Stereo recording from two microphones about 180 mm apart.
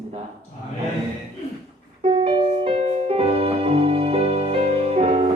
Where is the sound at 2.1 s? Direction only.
25° right (ahead or behind).